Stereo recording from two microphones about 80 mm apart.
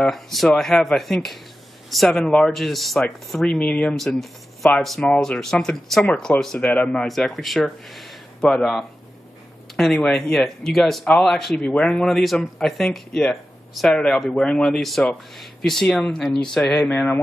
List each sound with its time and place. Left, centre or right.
0.0 s speech: centre
4.6 s speech: centre
5.1 s speech: centre
7.1 s speech: centre